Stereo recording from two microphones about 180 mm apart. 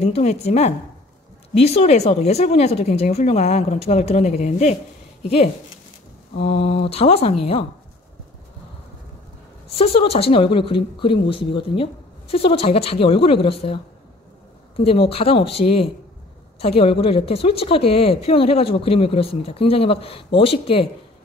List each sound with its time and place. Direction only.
0.0 s a woman's voice: 35° left (ahead or behind)
9.7 s a woman's voice: 35° left (ahead or behind)
14.8 s a woman's voice: 30° left (ahead or behind)